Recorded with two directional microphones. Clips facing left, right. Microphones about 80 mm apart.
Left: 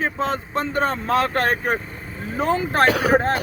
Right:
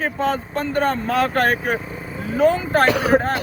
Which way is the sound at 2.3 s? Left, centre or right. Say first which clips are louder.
Right 4 dB; left.